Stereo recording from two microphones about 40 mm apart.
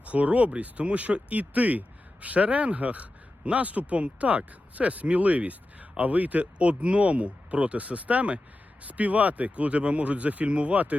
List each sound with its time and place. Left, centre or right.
0.0 s a man's voice: right